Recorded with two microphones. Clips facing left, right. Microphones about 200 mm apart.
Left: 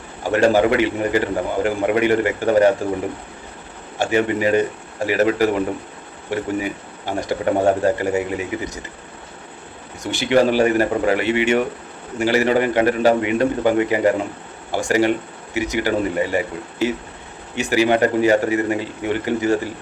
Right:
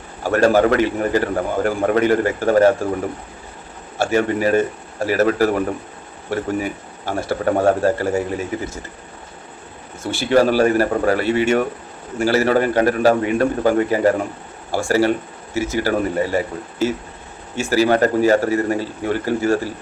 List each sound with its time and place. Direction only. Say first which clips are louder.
0.2 s a man's voice: right 1 dB; 15° left (ahead or behind)
3.9 s speech: right 1 dB; 15° left (ahead or behind)
10.0 s speech: right 1 dB; 15° left (ahead or behind)